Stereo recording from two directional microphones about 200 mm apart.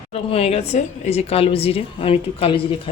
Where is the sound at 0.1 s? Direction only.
30° left (ahead or behind).